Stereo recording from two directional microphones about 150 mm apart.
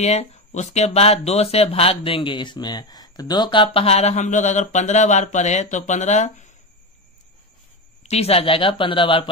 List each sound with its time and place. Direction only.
0.0 s speech: 45° left (ahead or behind)
8.0 s speech: 45° left (ahead or behind)